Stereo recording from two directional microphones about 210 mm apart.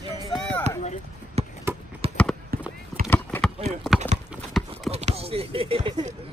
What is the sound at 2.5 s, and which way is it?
Clip-clop, 45° right (ahead or behind).